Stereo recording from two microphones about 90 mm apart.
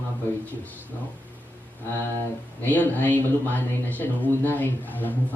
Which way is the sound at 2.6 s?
20° left (ahead or behind).